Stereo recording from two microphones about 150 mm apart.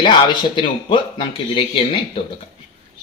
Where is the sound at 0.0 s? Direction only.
30° left (ahead or behind).